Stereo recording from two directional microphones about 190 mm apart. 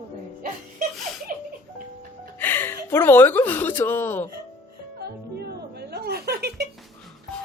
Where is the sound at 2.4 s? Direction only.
10° left (ahead or behind).